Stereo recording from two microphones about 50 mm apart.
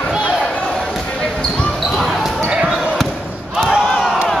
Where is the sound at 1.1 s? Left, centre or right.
Left.